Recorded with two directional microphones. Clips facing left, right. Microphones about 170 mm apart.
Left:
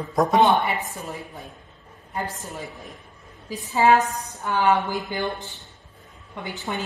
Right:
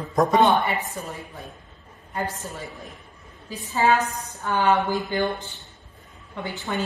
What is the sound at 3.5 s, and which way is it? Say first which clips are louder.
Speech: left 3 dB; 20° left (ahead or behind).